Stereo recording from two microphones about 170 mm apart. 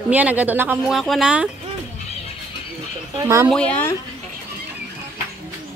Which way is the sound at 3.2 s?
15° right (ahead or behind).